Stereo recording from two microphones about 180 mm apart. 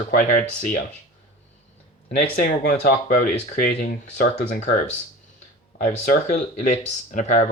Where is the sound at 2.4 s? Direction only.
45° left (ahead or behind).